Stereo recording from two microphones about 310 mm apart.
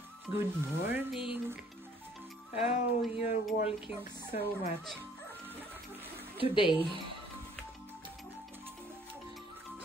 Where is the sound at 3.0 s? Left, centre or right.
Centre.